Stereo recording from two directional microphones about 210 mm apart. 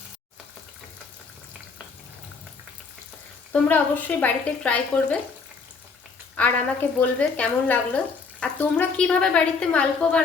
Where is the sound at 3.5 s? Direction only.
10° left (ahead or behind).